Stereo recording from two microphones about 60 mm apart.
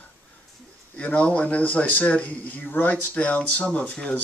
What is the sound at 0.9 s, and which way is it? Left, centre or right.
Speech, left.